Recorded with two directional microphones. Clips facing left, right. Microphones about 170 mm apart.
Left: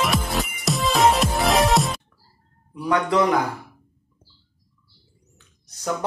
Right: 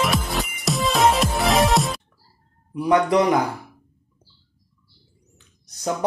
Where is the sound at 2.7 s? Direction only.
15° right (ahead or behind).